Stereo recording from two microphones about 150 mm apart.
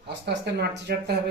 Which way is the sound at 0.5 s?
90° right.